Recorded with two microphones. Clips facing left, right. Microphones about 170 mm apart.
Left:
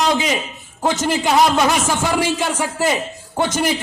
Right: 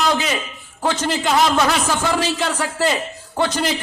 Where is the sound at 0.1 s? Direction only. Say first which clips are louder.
Left 2 dB; 15° left (ahead or behind).